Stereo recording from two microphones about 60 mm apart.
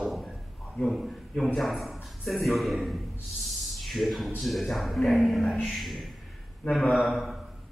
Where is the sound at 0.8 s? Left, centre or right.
Centre.